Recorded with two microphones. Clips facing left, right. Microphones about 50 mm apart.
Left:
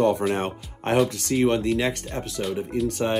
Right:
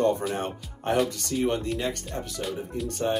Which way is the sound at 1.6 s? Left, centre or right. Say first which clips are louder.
Left 6 dB; left.